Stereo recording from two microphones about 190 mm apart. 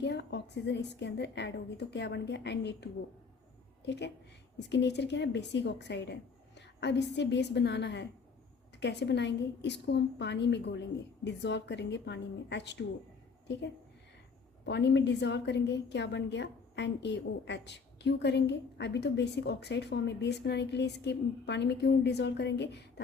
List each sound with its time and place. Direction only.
0.0 s a woman's voice: 65° left (ahead or behind)
14.6 s a woman's voice: 65° left (ahead or behind)